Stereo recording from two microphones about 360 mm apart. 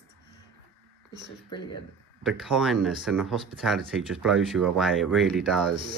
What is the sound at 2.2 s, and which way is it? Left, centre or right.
Speech, centre.